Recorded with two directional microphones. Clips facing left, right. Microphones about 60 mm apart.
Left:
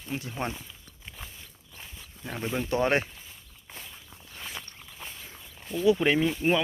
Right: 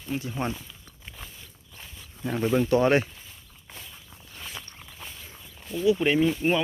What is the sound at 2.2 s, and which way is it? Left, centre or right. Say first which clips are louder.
Speech: right 8 dB; centre.